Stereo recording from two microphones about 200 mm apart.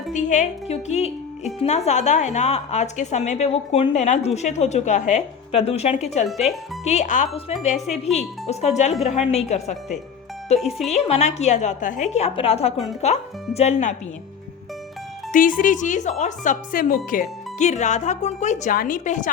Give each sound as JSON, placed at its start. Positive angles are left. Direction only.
{"t": 0.1, "sound": "speech", "side_deg": 40}
{"t": 6.2, "sound": "speech", "side_deg": 0}
{"t": 6.8, "sound": "speech", "side_deg": 35}
{"t": 10.6, "sound": "speech", "side_deg": 0}
{"t": 10.9, "sound": "speech", "side_deg": 35}
{"t": 15.3, "sound": "speech", "side_deg": 40}